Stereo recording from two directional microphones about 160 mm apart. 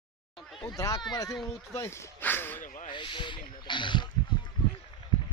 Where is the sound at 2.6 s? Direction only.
50° left (ahead or behind).